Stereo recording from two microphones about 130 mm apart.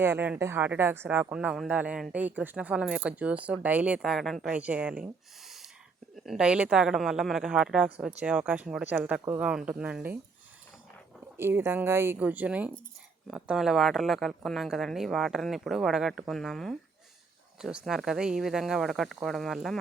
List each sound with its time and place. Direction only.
0.0 s speech: 15° right (ahead or behind)
11.3 s speech: 20° right (ahead or behind); by 16.7 s centre (ahead or behind)
17.8 s speech: 5° right (ahead or behind)